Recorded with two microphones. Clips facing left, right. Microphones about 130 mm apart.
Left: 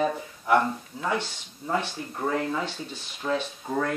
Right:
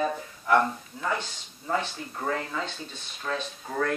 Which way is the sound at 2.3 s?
15° left (ahead or behind).